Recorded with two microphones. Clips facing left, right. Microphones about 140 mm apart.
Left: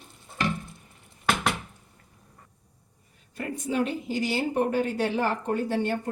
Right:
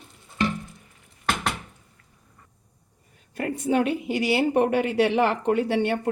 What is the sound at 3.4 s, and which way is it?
Speech, 65° right (ahead or behind).